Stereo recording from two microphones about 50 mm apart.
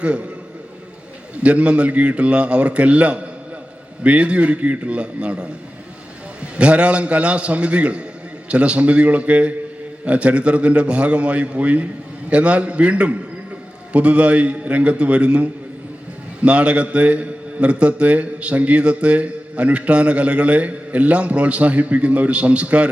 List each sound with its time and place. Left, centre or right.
1.4 s a man's voice: right
6.6 s a man's voice: right